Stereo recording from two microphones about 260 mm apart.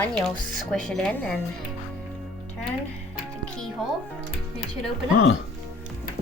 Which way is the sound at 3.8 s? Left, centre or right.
Centre.